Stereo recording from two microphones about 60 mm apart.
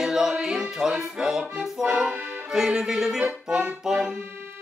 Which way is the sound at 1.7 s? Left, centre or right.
Centre.